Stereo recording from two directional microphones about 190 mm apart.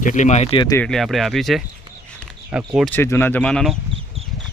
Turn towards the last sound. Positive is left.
turn(degrees=5)  # may be behind; listen again after turning